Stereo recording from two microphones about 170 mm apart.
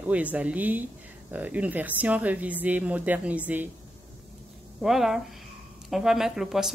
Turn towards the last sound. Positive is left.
turn(degrees=0)  # may be behind; listen again after turning